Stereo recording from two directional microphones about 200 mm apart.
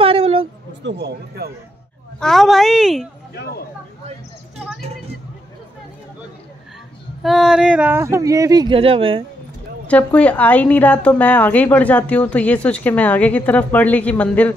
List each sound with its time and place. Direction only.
0.0 s a sound: 30° right (ahead or behind)
0.8 s speech: 55° right (ahead or behind)
2.1 s a woman's voice: centre (ahead or behind)
7.2 s speech: centre (ahead or behind); by 9.2 s 25° right (ahead or behind)
9.8 s a woman's voice: 5° left (ahead or behind)